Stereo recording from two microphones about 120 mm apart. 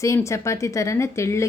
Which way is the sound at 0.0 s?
25° left (ahead or behind).